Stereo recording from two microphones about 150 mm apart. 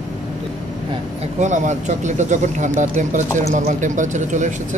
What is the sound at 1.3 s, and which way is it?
Speech, 55° right (ahead or behind).